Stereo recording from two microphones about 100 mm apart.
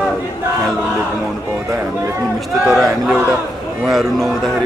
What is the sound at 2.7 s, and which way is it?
Speech, centre (ahead or behind).